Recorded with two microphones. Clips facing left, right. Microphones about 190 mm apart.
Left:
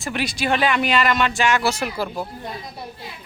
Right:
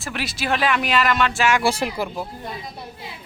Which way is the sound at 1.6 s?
30° right (ahead or behind).